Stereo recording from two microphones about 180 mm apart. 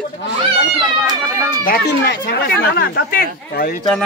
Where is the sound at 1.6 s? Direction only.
60° left (ahead or behind).